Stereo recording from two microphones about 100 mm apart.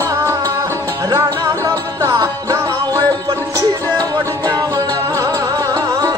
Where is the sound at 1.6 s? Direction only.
30° right (ahead or behind).